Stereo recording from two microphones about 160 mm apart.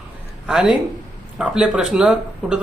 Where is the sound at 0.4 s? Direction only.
5° right (ahead or behind).